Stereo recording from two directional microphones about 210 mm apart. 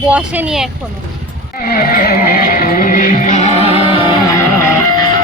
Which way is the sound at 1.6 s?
45° left (ahead or behind).